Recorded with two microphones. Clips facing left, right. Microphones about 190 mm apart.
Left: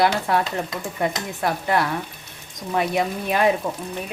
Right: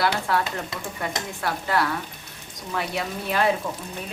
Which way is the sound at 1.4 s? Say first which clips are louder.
Left 3 dB; 20° left (ahead or behind).